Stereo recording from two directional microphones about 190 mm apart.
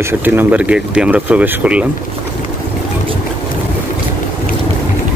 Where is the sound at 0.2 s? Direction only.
10° right (ahead or behind).